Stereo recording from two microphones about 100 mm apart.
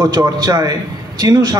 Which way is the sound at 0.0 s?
45° right (ahead or behind).